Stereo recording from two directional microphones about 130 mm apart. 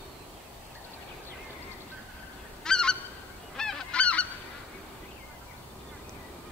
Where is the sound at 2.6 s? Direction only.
5° left (ahead or behind).